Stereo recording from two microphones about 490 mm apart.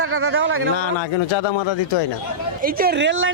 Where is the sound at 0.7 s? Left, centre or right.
Left.